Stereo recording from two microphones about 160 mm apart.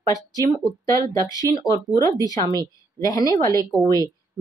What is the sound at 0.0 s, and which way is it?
Speech, 20° left (ahead or behind).